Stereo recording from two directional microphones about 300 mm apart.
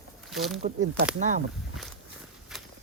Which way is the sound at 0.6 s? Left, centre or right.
Right.